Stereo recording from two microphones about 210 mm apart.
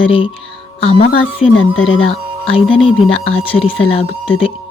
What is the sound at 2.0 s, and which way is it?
Speech, 25° left (ahead or behind).